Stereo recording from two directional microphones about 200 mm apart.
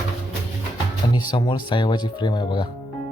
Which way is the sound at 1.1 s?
25° left (ahead or behind).